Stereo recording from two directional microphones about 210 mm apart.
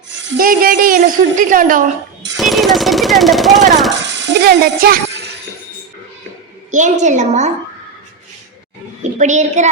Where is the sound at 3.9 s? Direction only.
60° right (ahead or behind).